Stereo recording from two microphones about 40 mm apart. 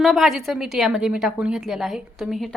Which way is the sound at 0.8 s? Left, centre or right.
Centre.